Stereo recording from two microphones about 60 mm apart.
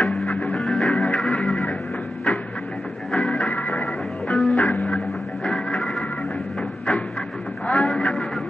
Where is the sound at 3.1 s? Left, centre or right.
Centre.